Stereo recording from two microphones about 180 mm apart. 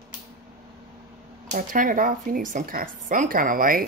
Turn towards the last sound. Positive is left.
turn(degrees=-50)  # may be behind; listen again after turning